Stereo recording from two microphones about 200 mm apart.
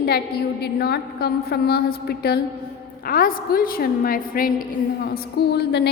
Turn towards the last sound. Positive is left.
turn(degrees=55)  # may be behind; listen again after turning